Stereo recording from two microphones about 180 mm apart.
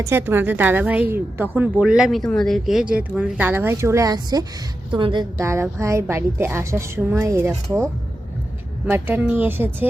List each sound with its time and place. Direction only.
0.0 s a woman's voice: 15° right (ahead or behind)
5.4 s a woman's voice: 15° right (ahead or behind)
8.9 s a woman's voice: 10° right (ahead or behind)